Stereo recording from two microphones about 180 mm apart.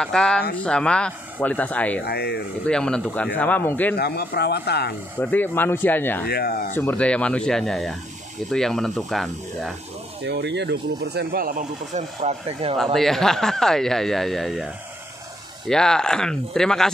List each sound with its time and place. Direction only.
0.0 s speech: 5° left (ahead or behind)
2.0 s speech: 65° left (ahead or behind)
2.6 s speech: 5° left (ahead or behind)
3.9 s speech: 60° left (ahead or behind)
5.2 s speech: 10° left (ahead or behind)
6.2 s speech: 60° left (ahead or behind)
6.7 s speech: 10° left (ahead or behind)
10.2 s speech: 70° right (ahead or behind); by 12.7 s 35° right (ahead or behind)
12.7 s speech: centre (ahead or behind)